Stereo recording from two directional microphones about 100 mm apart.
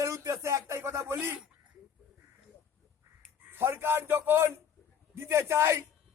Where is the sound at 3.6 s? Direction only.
25° right (ahead or behind).